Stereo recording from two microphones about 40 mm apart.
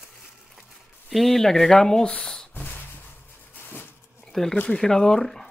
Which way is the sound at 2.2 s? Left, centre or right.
Left.